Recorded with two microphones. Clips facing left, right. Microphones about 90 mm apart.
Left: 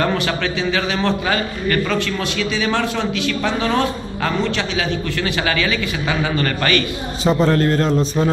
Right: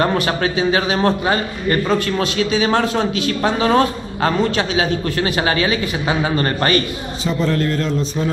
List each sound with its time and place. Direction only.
0.0 s a man's voice: 35° right (ahead or behind)
2.0 s speech: 45° right (ahead or behind)
7.2 s a man's voice: 40° left (ahead or behind)